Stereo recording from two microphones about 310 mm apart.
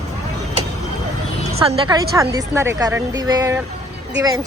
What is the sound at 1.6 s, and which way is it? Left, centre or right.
Speech, centre.